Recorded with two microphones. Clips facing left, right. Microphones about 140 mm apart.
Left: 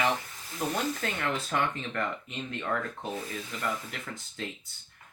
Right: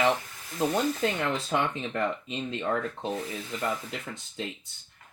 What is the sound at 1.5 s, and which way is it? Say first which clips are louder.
Speech: right 2 dB; 20° right (ahead or behind).